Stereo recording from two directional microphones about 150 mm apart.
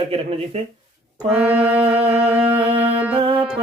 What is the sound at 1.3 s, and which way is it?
Music, 10° right (ahead or behind).